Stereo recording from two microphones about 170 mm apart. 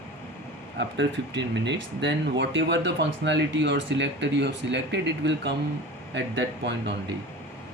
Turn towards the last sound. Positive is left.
turn(degrees=-90)